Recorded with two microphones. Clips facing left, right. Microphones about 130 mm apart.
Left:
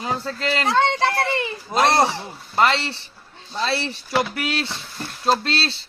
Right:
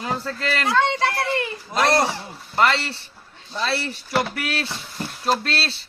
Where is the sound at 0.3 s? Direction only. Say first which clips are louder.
Left 2 dB; 20° left (ahead or behind).